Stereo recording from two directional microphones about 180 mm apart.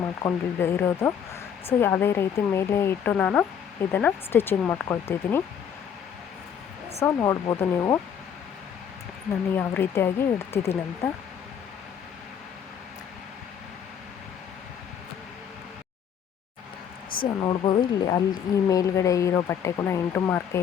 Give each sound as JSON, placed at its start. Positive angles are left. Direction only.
{"t": 0.0, "sound": "speech", "side_deg": 15}
{"t": 7.0, "sound": "speech", "side_deg": 15}
{"t": 9.6, "sound": "speech", "side_deg": 10}
{"t": 17.4, "sound": "speech", "side_deg": 25}